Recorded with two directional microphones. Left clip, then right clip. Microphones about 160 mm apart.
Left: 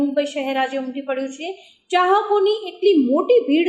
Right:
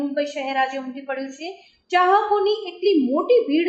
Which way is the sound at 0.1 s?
45° left (ahead or behind).